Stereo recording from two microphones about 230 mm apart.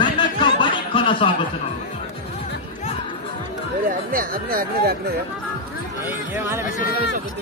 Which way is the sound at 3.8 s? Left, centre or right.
Right.